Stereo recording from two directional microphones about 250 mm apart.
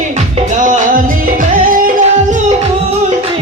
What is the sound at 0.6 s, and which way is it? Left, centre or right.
Music, right.